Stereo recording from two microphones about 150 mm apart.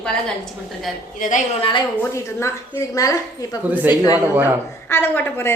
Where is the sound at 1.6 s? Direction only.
35° left (ahead or behind).